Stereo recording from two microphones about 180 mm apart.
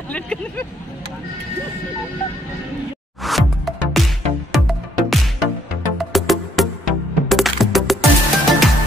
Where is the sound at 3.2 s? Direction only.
Centre (ahead or behind).